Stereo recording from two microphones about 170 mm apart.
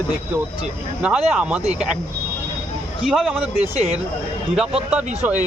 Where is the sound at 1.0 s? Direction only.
5° right (ahead or behind).